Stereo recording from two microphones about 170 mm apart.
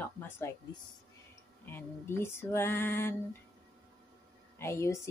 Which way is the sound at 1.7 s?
15° left (ahead or behind).